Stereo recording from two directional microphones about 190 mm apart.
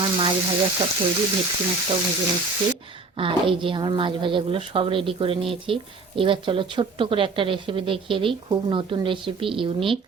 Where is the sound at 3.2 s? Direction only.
25° right (ahead or behind).